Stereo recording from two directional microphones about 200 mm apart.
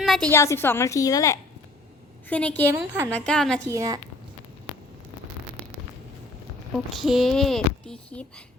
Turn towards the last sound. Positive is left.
turn(degrees=0)  # may be behind; listen again after turning